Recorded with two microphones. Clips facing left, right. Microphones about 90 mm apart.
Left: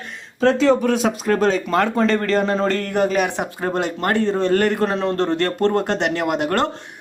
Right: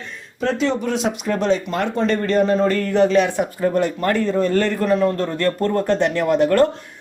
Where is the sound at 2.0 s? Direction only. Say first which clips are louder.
Even; 90° left.